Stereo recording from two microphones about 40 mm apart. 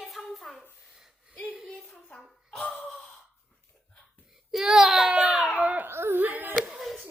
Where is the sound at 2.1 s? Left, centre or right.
Centre.